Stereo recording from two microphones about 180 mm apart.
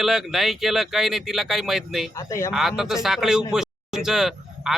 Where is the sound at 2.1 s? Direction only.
15° left (ahead or behind).